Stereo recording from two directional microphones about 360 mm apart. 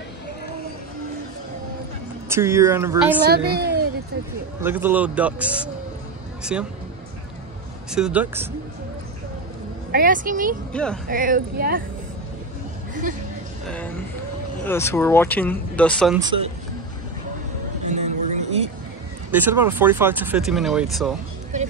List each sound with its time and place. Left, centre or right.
2.2 s speech: centre
3.3 s a woman's voice: right
4.6 s speech: centre
7.9 s speech: centre
9.8 s speech: right
10.7 s speech: centre
11.1 s speech: right
14.6 s speech: centre
18.0 s a sound: centre
19.3 s speech: centre